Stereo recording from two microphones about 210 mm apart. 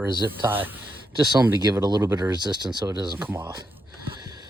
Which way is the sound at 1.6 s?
20° right (ahead or behind).